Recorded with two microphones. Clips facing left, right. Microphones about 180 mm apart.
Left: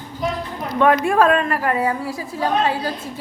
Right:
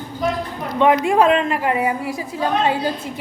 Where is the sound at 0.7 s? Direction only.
20° right (ahead or behind).